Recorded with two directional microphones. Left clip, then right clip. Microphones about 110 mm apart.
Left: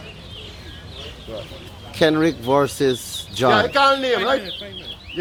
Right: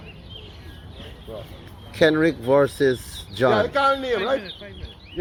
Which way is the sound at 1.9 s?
10° left (ahead or behind).